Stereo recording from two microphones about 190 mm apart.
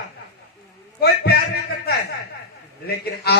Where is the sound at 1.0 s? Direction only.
55° left (ahead or behind).